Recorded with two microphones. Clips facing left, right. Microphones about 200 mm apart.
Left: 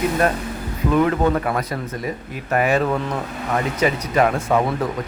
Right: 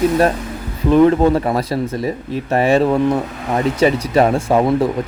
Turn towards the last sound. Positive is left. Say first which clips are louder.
# right 5 dB
turn(degrees=-30)  # may be behind; listen again after turning